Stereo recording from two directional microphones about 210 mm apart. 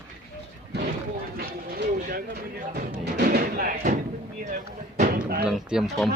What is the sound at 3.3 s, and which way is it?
Music, 45° right (ahead or behind).